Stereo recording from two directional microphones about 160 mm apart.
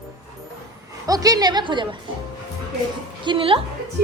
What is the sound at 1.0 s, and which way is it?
Speech, 20° right (ahead or behind).